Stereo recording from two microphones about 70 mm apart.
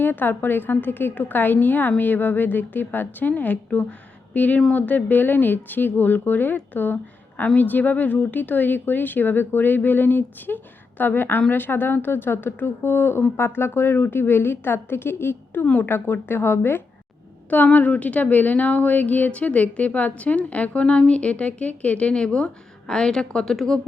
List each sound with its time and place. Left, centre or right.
0.0 s a woman's voice: left
15.6 s a woman's voice: left
17.5 s speech: left; by 23.8 s centre